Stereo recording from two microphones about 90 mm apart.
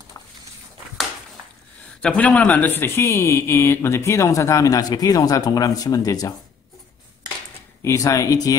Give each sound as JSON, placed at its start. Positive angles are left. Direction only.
{"t": 0.2, "sound": "a sound", "side_deg": 40}
{"t": 2.0, "sound": "a man's voice", "side_deg": 15}
{"t": 7.8, "sound": "a man's voice", "side_deg": 35}